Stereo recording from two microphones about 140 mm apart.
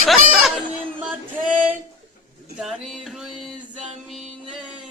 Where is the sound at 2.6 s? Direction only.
Centre (ahead or behind).